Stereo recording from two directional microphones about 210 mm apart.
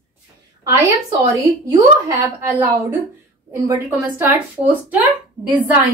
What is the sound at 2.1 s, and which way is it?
Speech, 10° right (ahead or behind).